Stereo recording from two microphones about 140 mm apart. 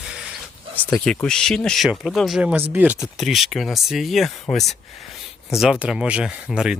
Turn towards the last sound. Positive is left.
turn(degrees=-5)  # may be behind; listen again after turning